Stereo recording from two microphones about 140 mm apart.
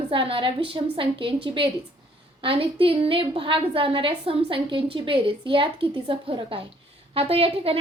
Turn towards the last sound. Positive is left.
turn(degrees=-40)  # may be behind; listen again after turning